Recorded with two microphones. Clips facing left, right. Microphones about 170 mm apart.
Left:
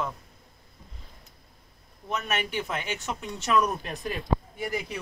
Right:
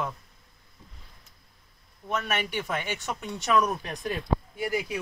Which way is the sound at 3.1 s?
10° right (ahead or behind).